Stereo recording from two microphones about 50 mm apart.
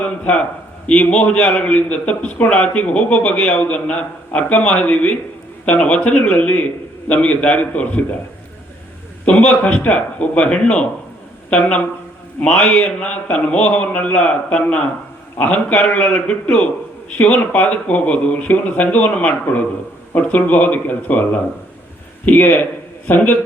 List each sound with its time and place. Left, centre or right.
0.0 s a man's voice: left
1.7 s speech: left
9.2 s speech: left
22.3 s speech: left